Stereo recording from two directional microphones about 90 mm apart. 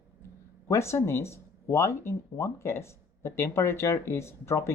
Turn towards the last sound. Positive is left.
turn(degrees=30)  # may be behind; listen again after turning